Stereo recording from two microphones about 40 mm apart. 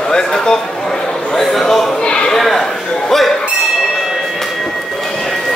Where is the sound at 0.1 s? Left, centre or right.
Centre.